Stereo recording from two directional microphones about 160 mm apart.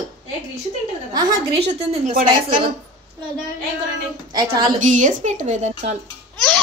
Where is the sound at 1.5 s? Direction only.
40° right (ahead or behind).